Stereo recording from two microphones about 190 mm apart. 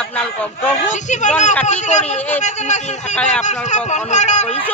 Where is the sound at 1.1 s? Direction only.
40° left (ahead or behind).